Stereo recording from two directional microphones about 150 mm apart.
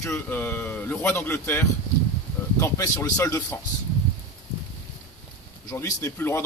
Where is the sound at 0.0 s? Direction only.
15° left (ahead or behind).